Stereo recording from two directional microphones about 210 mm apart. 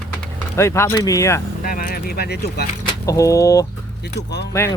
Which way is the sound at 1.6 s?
45° left (ahead or behind).